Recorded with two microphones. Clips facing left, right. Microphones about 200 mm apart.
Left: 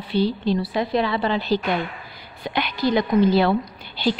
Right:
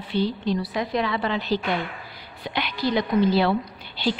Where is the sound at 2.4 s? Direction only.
50° left (ahead or behind).